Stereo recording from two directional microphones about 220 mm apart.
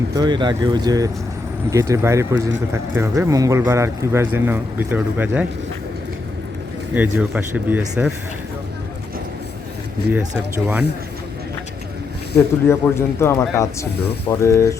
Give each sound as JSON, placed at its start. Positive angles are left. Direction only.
{"t": 0.2, "sound": "speech", "side_deg": -20}
{"t": 6.9, "sound": "speech", "side_deg": -5}
{"t": 10.1, "sound": "speech", "side_deg": -5}
{"t": 12.6, "sound": "speech", "side_deg": 10}